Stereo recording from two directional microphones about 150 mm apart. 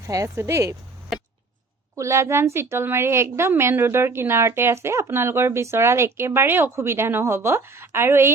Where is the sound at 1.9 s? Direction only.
20° right (ahead or behind).